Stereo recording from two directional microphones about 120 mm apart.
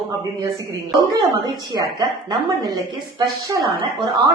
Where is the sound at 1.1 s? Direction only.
30° right (ahead or behind).